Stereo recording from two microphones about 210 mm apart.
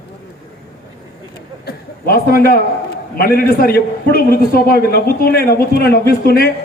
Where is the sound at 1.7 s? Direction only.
45° left (ahead or behind).